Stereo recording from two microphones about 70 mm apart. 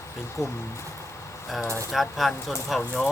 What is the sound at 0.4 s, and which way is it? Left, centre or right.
Speech, left.